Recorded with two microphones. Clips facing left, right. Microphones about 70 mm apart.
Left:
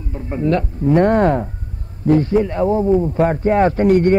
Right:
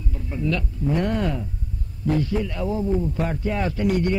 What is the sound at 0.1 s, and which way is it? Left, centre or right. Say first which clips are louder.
A man's voice: left 8 dB; left.